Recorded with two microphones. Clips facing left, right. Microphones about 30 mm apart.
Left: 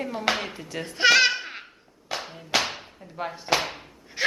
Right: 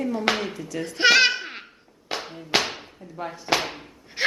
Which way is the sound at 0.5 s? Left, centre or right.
Left.